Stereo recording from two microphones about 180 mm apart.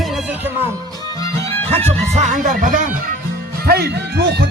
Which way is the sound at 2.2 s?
45° right (ahead or behind).